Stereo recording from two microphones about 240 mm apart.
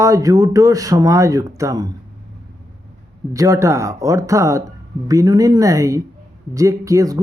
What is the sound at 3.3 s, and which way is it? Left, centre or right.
Speech, centre.